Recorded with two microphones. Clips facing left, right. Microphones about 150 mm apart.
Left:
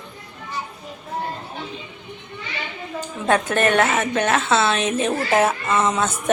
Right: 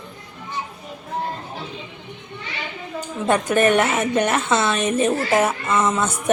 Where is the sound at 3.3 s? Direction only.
10° right (ahead or behind).